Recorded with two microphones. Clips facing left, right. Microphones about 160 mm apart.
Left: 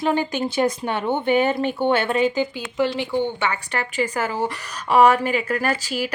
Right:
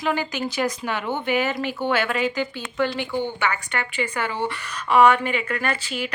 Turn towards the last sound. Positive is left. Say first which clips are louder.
# left 3 dB
turn(degrees=40)  # may be behind; listen again after turning